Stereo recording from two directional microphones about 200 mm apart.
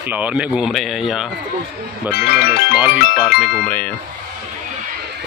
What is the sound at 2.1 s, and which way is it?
Speech, 50° left (ahead or behind).